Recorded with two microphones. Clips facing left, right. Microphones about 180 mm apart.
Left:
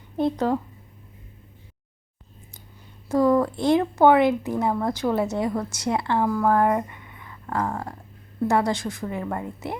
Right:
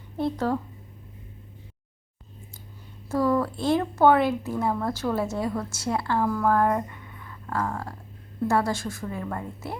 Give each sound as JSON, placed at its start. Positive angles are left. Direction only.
{"t": 0.2, "sound": "speech", "side_deg": 20}
{"t": 3.1, "sound": "a woman's voice", "side_deg": 15}